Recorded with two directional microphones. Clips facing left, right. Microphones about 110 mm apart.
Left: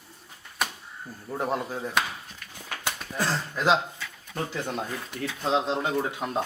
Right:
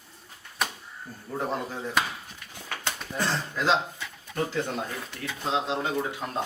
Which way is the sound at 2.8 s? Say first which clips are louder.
Left 1 dB; 5° left (ahead or behind).